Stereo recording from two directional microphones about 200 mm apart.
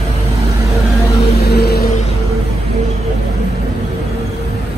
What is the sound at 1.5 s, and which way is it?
Vehicle, 55° left (ahead or behind).